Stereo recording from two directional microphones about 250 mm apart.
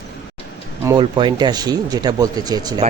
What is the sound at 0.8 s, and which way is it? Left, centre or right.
Speech, centre.